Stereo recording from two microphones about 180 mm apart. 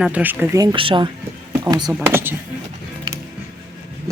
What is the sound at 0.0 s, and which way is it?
Speech, 10° right (ahead or behind).